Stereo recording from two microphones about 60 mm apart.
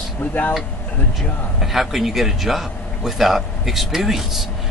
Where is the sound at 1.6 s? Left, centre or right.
Centre.